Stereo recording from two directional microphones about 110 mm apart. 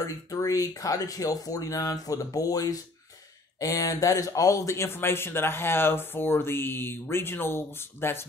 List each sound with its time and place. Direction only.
0.0 s speech: 30° left (ahead or behind)